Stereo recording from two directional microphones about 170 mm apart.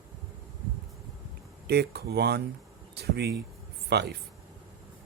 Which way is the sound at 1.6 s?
75° right (ahead or behind).